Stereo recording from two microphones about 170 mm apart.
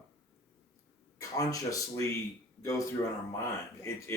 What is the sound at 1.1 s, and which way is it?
Speech, 20° left (ahead or behind).